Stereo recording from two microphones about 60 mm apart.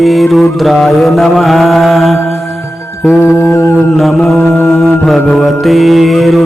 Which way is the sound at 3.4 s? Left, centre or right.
Left.